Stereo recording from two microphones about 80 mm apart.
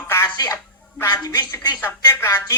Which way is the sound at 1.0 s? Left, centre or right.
Left.